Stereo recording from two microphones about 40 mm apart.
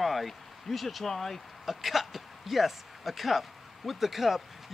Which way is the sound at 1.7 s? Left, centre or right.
Centre.